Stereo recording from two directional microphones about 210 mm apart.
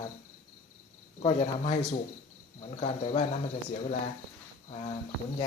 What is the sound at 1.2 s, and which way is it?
Speech, 30° left (ahead or behind).